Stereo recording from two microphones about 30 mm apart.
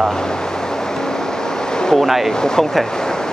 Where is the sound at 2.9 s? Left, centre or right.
Left.